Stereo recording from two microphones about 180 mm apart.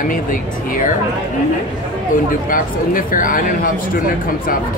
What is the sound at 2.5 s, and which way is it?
Speech, 50° left (ahead or behind).